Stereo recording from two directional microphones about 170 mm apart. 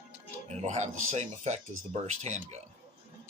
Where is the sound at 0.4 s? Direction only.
40° right (ahead or behind).